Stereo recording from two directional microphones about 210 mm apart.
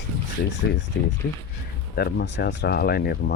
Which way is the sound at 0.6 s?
60° left (ahead or behind).